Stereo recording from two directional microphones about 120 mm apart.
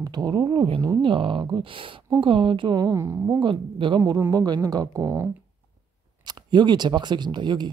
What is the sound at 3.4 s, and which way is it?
Speech, 40° right (ahead or behind).